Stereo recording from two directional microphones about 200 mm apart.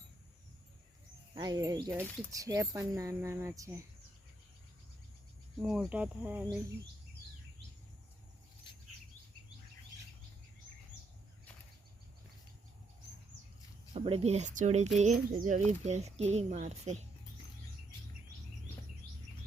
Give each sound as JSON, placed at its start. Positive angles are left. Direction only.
{"t": 1.4, "sound": "speech", "side_deg": -20}
{"t": 5.6, "sound": "speech", "side_deg": -5}
{"t": 13.9, "sound": "speech", "side_deg": -30}